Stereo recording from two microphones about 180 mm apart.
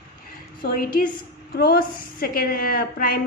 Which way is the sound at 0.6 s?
55° left (ahead or behind).